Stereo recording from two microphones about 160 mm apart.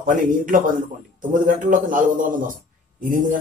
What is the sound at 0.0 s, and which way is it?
A man's voice, 55° right (ahead or behind).